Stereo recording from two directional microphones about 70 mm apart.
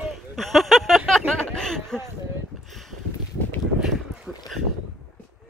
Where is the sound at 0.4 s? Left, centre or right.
Centre.